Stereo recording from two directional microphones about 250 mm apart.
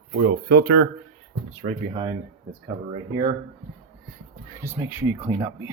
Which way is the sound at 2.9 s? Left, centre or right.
Right.